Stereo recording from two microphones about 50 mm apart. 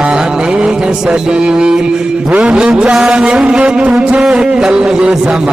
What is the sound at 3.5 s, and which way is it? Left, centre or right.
Music, centre.